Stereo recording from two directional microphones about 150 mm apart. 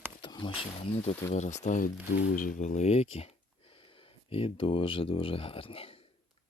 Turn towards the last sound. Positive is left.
turn(degrees=40)  # may be behind; listen again after turning